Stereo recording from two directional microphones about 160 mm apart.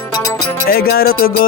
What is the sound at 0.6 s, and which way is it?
Music, 70° left (ahead or behind).